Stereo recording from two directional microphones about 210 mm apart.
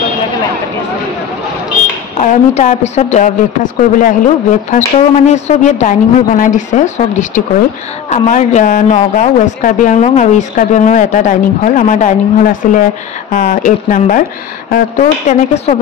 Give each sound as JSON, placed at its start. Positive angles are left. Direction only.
{"t": 2.1, "sound": "speech", "side_deg": 35}